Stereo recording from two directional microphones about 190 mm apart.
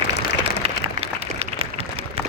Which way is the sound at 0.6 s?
30° right (ahead or behind).